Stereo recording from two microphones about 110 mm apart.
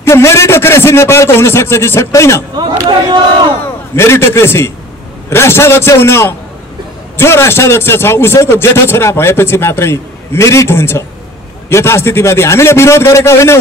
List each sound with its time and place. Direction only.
0.0 s a man's voice: 25° left (ahead or behind)
2.5 s a sound: 45° right (ahead or behind)
3.9 s a man's voice: 25° left (ahead or behind)